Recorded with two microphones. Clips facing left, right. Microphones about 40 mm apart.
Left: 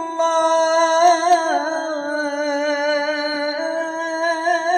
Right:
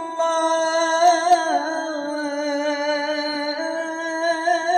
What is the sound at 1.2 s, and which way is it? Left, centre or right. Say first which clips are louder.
Music: left 1 dB; centre.